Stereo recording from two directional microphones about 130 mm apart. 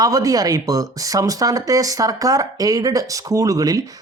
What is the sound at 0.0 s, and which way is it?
Speech, 25° right (ahead or behind).